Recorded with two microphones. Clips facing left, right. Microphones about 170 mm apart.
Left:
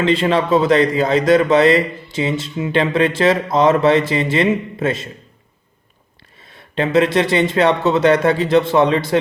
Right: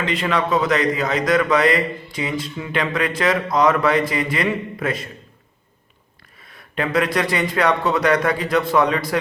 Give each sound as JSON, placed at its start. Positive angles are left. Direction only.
{"t": 0.0, "sound": "a man's voice", "side_deg": 30}
{"t": 6.4, "sound": "a man's voice", "side_deg": 25}